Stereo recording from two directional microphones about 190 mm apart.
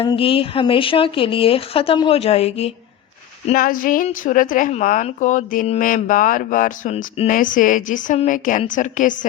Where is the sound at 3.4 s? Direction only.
45° left (ahead or behind).